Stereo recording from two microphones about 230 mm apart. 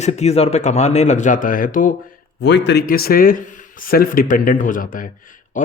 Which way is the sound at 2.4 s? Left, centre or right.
Left.